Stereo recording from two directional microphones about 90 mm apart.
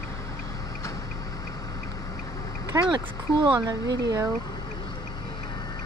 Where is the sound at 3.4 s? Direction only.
55° right (ahead or behind).